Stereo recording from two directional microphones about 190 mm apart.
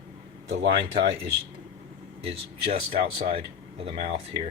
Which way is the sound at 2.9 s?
30° right (ahead or behind).